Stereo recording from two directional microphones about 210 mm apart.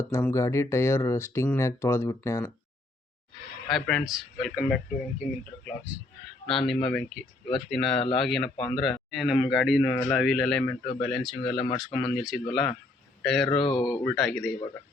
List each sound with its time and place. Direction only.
0.0 s speech: 10° left (ahead or behind)
3.7 s speech: centre (ahead or behind)
6.5 s speech: centre (ahead or behind)
13.7 s speech: 20° left (ahead or behind)
14.2 s speech: centre (ahead or behind)